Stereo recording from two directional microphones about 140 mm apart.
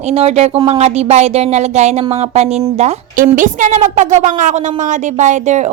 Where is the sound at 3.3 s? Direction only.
65° right (ahead or behind).